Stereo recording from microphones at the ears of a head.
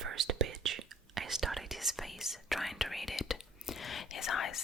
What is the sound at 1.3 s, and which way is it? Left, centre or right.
Whispering, centre.